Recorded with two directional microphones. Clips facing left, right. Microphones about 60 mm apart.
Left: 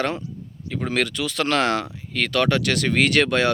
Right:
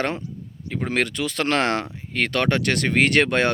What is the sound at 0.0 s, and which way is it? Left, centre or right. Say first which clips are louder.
Speech: left 1 dB; right.